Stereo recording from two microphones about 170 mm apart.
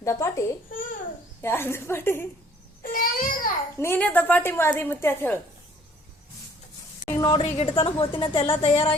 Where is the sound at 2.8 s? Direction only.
55° left (ahead or behind).